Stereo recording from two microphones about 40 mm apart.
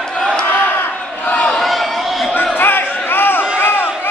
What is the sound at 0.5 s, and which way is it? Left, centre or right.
Battle cry, left.